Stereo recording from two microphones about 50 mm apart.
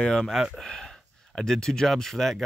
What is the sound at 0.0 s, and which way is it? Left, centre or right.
Speech, centre.